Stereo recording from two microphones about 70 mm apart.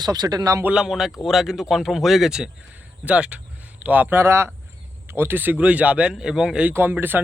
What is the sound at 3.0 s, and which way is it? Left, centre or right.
A man's voice, centre.